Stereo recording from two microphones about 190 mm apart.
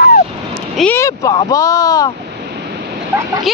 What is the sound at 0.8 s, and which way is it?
Speech, 10° left (ahead or behind).